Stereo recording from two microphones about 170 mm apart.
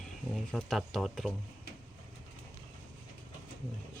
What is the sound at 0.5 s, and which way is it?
Speech, centre (ahead or behind).